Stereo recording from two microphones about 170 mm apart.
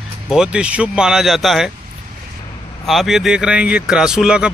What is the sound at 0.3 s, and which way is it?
Speech, 5° right (ahead or behind).